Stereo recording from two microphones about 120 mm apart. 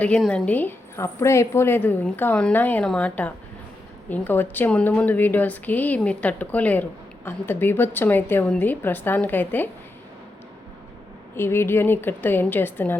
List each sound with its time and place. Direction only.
0.2 s a woman's voice: 5° left (ahead or behind)
11.3 s a woman's voice: 20° left (ahead or behind)